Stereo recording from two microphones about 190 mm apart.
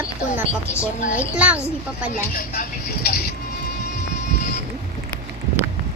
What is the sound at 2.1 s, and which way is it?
Speech, 50° left (ahead or behind).